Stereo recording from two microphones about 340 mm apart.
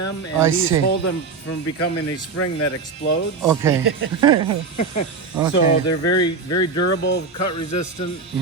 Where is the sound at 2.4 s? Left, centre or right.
Left.